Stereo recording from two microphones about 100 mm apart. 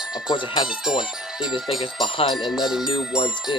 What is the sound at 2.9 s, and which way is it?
Speech, 75° left (ahead or behind).